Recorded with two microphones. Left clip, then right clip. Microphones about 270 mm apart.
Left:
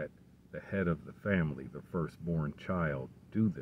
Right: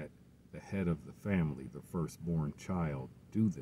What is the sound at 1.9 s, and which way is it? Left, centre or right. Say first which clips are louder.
Speech: left 3 dB; left.